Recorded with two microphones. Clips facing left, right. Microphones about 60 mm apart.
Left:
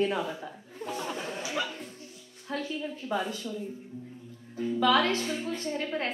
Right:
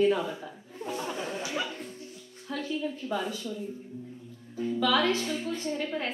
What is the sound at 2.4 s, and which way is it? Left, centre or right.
Speech, centre.